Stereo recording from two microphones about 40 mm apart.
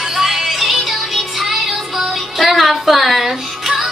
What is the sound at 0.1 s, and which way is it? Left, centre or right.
Music, centre.